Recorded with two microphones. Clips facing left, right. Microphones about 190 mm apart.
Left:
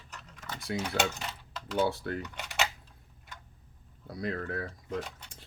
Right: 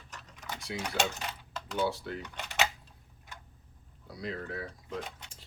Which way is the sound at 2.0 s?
50° left (ahead or behind).